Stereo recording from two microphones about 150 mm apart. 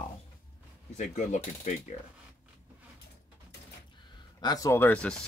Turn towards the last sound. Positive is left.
turn(degrees=5)  # may be behind; listen again after turning